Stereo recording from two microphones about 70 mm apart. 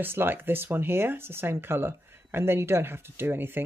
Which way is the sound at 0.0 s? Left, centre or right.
Right.